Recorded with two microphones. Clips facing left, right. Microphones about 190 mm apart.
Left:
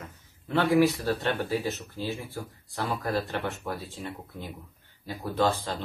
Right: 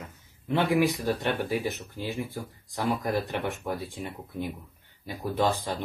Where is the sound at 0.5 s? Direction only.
15° right (ahead or behind).